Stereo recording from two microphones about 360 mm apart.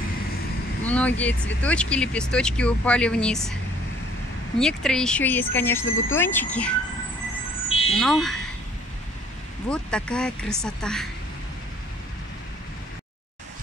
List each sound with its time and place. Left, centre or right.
0.8 s speech: centre
4.6 s speech: centre
5.9 s speech: left
6.1 s speech: centre
7.9 s speech: centre
9.7 s speech: centre